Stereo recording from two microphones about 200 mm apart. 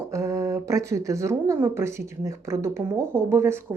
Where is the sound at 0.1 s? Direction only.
15° right (ahead or behind).